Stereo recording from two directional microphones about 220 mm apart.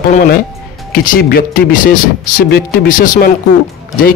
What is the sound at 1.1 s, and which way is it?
Speech, 40° left (ahead or behind).